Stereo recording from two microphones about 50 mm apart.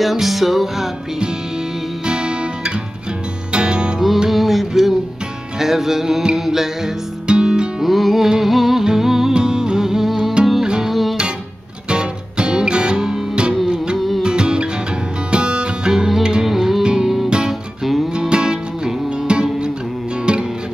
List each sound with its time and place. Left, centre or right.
0.0 s music: centre
2.0 s music: centre
4.3 s music: centre
7.8 s music: centre
11.9 s music: centre
13.9 s music: centre
14.2 s music: centre
18.1 s music: centre